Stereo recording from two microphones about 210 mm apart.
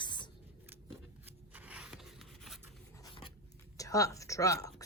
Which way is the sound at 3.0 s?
25° left (ahead or behind).